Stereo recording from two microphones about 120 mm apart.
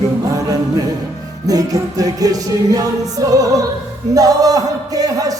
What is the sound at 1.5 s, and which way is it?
Music, 30° right (ahead or behind).